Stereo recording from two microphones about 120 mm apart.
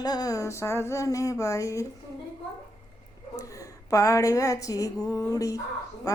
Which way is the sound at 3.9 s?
25° left (ahead or behind).